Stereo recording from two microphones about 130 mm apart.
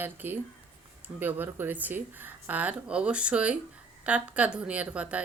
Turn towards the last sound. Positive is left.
turn(degrees=-10)  # may be behind; listen again after turning